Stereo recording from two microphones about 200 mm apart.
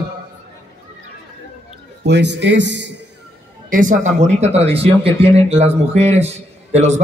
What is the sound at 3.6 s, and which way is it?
Speech, 40° right (ahead or behind).